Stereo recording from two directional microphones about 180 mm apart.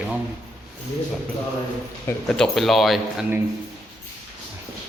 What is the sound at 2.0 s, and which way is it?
A man's voice, 5° left (ahead or behind).